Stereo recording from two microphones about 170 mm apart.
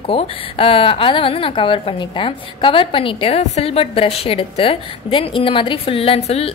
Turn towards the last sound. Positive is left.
turn(degrees=35)  # may be behind; listen again after turning